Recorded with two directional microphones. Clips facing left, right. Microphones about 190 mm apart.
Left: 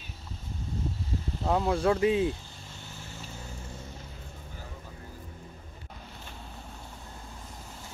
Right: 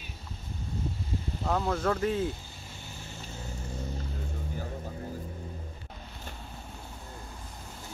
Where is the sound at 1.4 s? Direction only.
25° left (ahead or behind).